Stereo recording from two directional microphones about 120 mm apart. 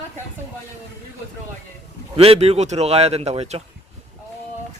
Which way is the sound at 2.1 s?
55° right (ahead or behind).